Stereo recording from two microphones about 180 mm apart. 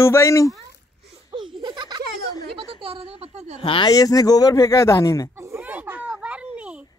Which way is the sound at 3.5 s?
30° left (ahead or behind).